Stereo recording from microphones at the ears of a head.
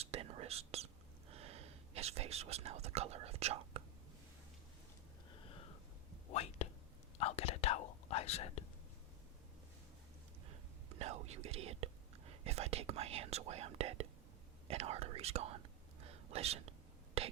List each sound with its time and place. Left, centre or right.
0.0 s whispering: right
5.3 s a sound: left
6.2 s whispering: left
10.5 s whispering: right